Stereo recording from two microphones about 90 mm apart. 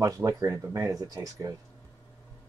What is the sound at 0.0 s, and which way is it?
Speech, 40° right (ahead or behind).